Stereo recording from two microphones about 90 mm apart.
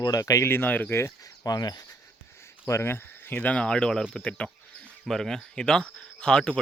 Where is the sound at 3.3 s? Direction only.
15° left (ahead or behind).